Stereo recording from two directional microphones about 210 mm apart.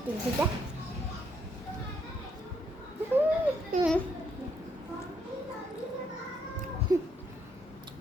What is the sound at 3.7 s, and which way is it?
Speech, 40° right (ahead or behind).